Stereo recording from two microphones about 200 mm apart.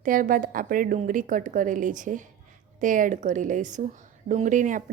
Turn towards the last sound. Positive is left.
turn(degrees=-40)  # may be behind; listen again after turning